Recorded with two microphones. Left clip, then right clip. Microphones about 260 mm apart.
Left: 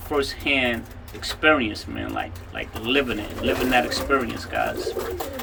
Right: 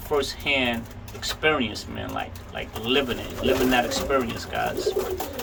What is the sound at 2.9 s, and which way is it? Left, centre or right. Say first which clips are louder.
Speech: left 1 dB; centre.